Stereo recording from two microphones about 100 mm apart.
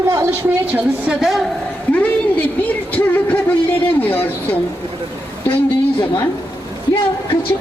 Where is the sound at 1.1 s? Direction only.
5° right (ahead or behind).